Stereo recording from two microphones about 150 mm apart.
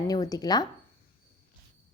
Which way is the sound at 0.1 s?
25° left (ahead or behind).